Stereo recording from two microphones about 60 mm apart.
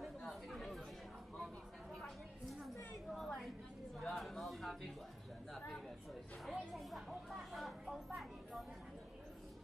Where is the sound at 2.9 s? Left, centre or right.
Centre.